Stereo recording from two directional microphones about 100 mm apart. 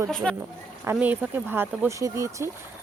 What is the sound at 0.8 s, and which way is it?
Speech, 20° right (ahead or behind).